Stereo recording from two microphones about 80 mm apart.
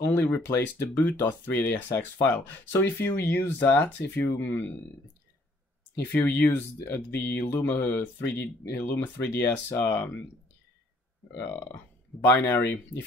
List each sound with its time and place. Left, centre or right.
0.0 s speech: left
6.1 s speech: left
12.3 s speech: left